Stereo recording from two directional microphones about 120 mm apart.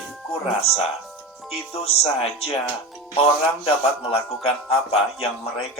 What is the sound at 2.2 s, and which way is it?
Speech, 55° left (ahead or behind).